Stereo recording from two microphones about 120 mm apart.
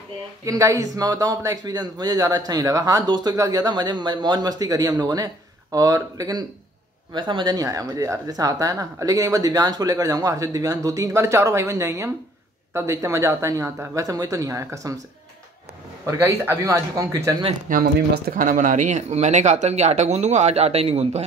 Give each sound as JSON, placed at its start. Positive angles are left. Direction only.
{"t": 0.5, "sound": "speech", "side_deg": -30}
{"t": 16.1, "sound": "speech", "side_deg": -25}
{"t": 18.4, "sound": "speech", "side_deg": -90}